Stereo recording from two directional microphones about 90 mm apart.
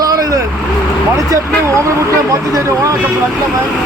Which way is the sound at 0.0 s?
40° right (ahead or behind).